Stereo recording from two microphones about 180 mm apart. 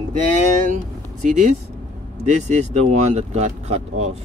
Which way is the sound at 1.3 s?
40° right (ahead or behind).